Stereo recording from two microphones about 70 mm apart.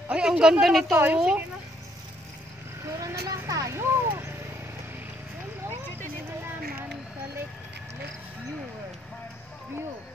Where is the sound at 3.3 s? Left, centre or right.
Right.